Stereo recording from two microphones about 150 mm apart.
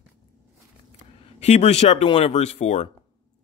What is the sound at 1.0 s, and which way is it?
Speech, 45° left (ahead or behind).